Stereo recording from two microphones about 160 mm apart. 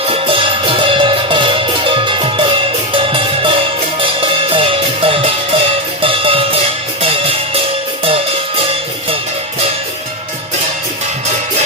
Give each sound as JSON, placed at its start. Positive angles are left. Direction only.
{"t": 0.1, "sound": "music", "side_deg": -35}